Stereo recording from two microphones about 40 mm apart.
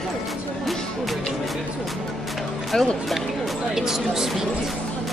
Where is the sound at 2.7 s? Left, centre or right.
Centre.